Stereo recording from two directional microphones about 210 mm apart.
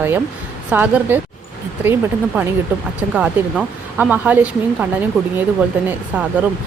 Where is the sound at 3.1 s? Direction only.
5° right (ahead or behind).